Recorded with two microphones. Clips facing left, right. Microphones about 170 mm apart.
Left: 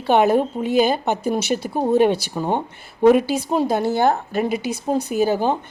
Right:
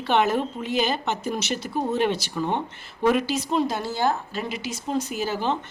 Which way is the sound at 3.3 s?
50° left (ahead or behind).